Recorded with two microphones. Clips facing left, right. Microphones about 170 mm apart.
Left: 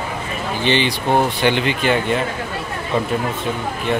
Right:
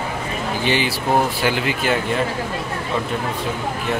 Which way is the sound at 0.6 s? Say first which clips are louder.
Left 3 dB; 5° right (ahead or behind).